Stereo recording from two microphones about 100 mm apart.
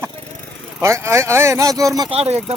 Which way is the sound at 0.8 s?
30° right (ahead or behind).